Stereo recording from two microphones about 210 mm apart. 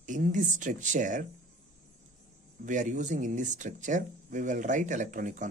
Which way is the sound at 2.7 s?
35° right (ahead or behind).